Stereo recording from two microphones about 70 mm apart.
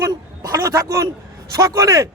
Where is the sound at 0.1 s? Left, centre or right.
Right.